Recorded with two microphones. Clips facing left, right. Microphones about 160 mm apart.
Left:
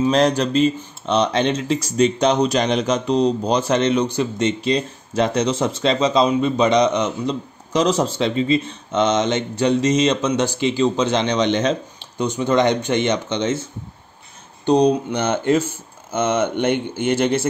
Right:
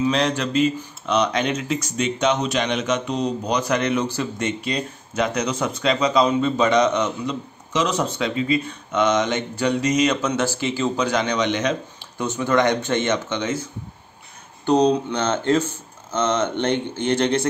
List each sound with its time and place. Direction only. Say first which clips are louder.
0.0 s speech: left 4 dB; 40° left (ahead or behind); by 7.1 s 20° left (ahead or behind)
7.2 s speech: left 3 dB; 35° left (ahead or behind)
14.7 s speech: left 2 dB; 15° left (ahead or behind)